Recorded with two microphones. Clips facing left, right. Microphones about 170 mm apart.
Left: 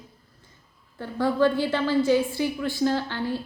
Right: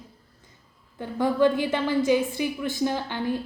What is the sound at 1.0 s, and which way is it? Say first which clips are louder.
A woman's voice: right 1 dB; 15° right (ahead or behind).